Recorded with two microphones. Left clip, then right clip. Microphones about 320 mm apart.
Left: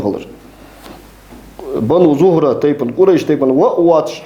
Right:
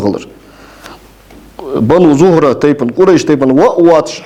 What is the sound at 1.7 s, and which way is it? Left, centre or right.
A man's voice, right.